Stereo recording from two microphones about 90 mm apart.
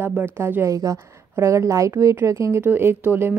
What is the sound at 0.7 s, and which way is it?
Speech, 40° right (ahead or behind).